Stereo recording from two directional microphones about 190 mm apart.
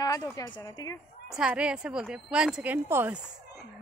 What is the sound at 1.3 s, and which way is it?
A woman's voice, 5° right (ahead or behind).